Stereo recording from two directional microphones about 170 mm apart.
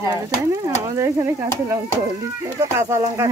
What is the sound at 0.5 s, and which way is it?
Stir, 20° right (ahead or behind).